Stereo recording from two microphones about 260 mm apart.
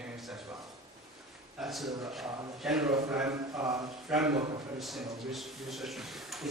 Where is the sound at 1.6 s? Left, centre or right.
Centre.